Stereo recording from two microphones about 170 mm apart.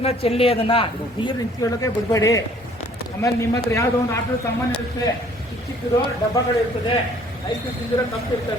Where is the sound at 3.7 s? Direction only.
15° left (ahead or behind).